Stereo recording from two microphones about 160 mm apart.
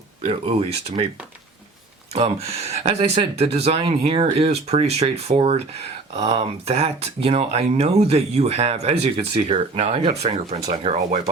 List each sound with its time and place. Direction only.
0.3 s speech: 35° right (ahead or behind)
2.1 s speech: 40° right (ahead or behind)